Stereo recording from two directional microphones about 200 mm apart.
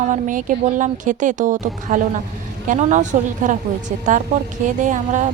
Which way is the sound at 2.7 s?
35° right (ahead or behind).